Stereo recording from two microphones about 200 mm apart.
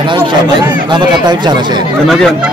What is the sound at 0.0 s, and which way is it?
Speech, 25° right (ahead or behind).